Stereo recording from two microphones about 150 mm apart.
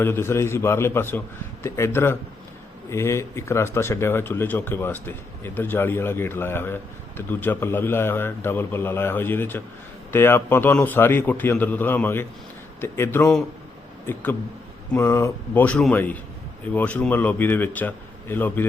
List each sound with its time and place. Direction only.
0.0 s speech: 15° left (ahead or behind)